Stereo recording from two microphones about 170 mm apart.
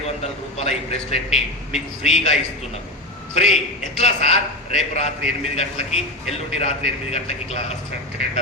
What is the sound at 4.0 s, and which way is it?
A man's voice, 40° left (ahead or behind).